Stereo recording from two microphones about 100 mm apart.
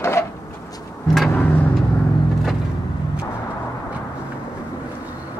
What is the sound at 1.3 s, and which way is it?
Vehicle, 20° left (ahead or behind).